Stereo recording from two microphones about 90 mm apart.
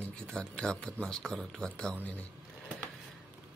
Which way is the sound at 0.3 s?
10° left (ahead or behind).